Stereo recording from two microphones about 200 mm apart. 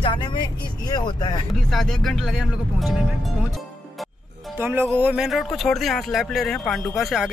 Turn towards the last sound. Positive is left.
turn(degrees=0)  # may be behind; listen again after turning